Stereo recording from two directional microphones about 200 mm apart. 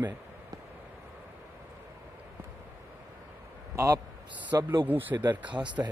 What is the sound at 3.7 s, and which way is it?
A man's voice, 15° right (ahead or behind).